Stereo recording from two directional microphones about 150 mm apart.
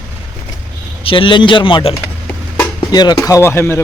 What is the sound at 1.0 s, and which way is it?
Speech, 35° left (ahead or behind).